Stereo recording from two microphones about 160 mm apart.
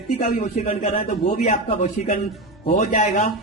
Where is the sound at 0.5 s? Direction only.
45° left (ahead or behind).